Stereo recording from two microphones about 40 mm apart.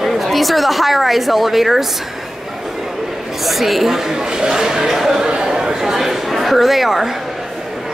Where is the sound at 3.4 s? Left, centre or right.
Centre.